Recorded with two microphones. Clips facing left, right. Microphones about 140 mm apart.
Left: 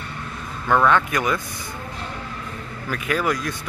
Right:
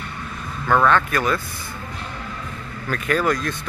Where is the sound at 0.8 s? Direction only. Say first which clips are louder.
Right 1 dB; 15° left (ahead or behind).